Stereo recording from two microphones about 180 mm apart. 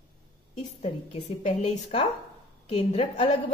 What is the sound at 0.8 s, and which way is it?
A woman's voice, 40° left (ahead or behind).